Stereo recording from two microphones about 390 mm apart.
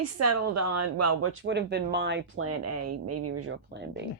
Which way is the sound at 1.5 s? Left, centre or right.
Right.